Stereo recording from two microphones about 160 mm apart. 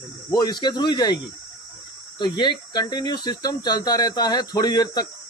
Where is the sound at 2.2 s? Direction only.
25° left (ahead or behind).